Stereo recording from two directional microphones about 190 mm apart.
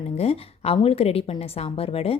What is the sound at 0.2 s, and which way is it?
A woman's voice, 30° left (ahead or behind).